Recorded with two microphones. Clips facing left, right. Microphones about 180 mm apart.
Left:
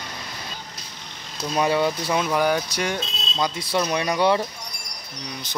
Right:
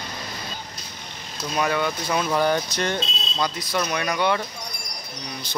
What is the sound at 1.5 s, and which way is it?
Speech, 30° left (ahead or behind).